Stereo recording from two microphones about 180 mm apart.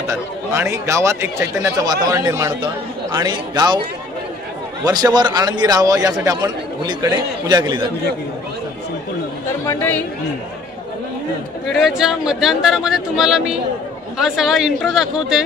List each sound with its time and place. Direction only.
0.1 s speech: 15° right (ahead or behind)
4.8 s a man's voice: 20° right (ahead or behind)
9.7 s speech: 10° left (ahead or behind)
11.6 s speech: centre (ahead or behind)